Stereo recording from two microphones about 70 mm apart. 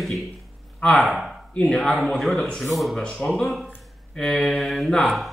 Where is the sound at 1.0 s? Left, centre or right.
Centre.